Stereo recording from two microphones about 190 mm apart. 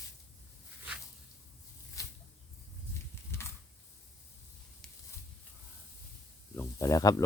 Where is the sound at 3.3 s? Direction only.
15° left (ahead or behind).